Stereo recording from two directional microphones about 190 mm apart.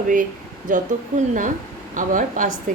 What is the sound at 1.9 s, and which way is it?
Speech, 45° right (ahead or behind).